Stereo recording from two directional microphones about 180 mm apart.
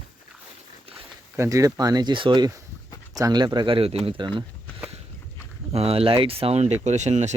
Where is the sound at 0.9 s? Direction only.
15° right (ahead or behind).